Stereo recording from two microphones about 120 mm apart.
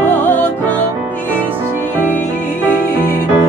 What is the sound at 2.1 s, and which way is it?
Music, 15° left (ahead or behind).